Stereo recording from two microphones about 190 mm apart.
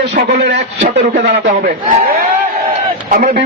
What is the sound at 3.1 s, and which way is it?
Speech, 45° right (ahead or behind).